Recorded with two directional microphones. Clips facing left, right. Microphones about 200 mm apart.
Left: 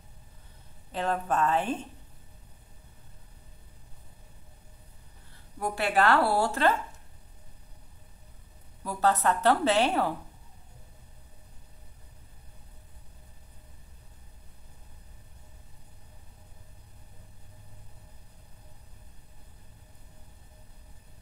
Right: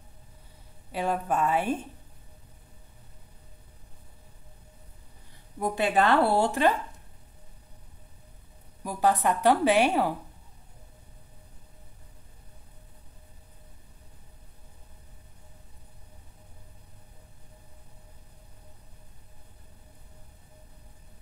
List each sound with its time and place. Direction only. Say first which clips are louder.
0.9 s a woman's voice: right 1 dB; 10° right (ahead or behind)
5.6 s speech: right 2 dB; 20° right (ahead or behind)
8.8 s a woman's voice: right 1 dB; 15° right (ahead or behind)